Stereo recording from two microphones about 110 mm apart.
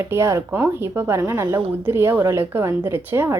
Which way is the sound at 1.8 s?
20° right (ahead or behind).